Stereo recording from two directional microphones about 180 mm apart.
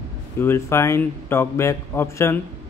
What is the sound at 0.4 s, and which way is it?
A man's voice, 15° left (ahead or behind).